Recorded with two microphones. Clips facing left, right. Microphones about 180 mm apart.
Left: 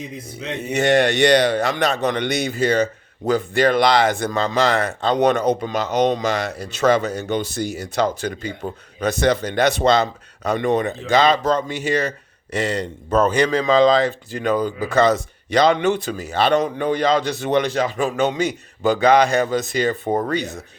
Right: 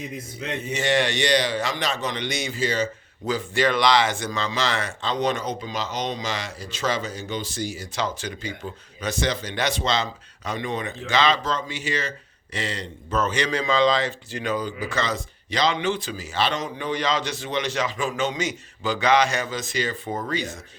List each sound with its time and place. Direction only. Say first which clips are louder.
0.6 s speech: left 7 dB; 60° left (ahead or behind)
11.2 s speech: left 5 dB; 50° left (ahead or behind)
12.5 s speech: left 8 dB; 45° left (ahead or behind)
13.2 s speech: left 6 dB; 55° left (ahead or behind)
17.8 s speech: left 5 dB; 45° left (ahead or behind)
18.2 s speech: left 7 dB; 60° left (ahead or behind)